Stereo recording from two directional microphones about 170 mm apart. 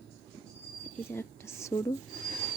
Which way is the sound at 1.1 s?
15° left (ahead or behind).